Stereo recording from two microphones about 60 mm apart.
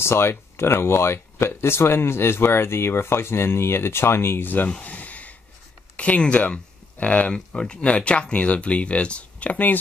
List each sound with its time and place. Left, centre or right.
0.0 s speech: left
4.6 s a sound: left
5.9 s speech: left